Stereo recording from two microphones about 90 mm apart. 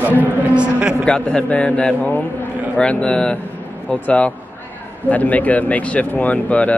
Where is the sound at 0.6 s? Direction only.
10° right (ahead or behind).